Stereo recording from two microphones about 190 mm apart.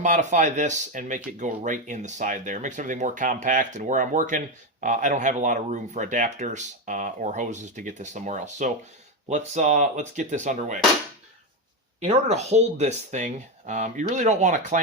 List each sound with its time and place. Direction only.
0.0 s speech: 40° right (ahead or behind)
11.9 s speech: 35° right (ahead or behind)